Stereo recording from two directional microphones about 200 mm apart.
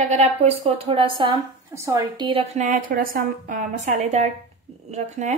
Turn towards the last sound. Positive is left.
turn(degrees=-35)  # may be behind; listen again after turning